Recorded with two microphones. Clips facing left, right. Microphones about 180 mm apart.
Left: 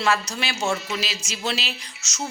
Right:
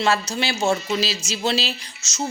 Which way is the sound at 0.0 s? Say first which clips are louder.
Right 2 dB; 25° right (ahead or behind).